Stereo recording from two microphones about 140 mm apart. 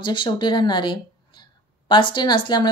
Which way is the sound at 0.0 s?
35° left (ahead or behind).